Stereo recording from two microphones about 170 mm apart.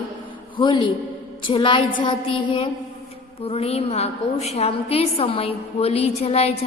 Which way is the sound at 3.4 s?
35° left (ahead or behind).